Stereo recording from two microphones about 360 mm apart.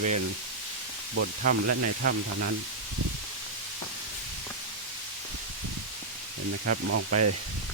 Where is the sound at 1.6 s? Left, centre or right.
Right.